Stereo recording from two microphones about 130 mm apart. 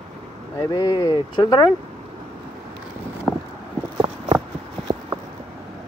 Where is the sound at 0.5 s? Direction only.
25° left (ahead or behind).